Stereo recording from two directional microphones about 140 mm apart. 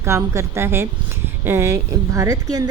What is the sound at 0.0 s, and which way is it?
A woman's voice, 20° right (ahead or behind).